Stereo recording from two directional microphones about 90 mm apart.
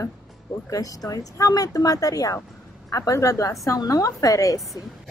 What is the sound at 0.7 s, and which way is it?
Speech, 45° left (ahead or behind).